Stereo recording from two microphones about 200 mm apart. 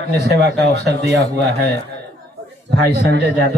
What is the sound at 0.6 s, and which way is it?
Speech, 55° right (ahead or behind).